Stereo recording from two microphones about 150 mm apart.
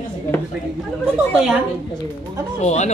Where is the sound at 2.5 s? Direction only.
50° left (ahead or behind).